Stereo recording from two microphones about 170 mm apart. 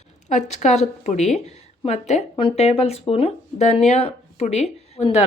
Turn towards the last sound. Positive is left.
turn(degrees=40)  # may be behind; listen again after turning